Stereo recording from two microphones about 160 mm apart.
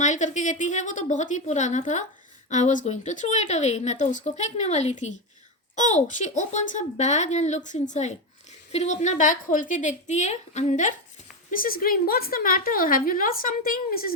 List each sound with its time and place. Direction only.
0.0 s speech: 50° left (ahead or behind)
11.5 s a woman's voice: 60° left (ahead or behind)